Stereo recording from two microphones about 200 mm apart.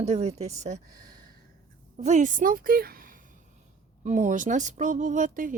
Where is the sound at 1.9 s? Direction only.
35° right (ahead or behind).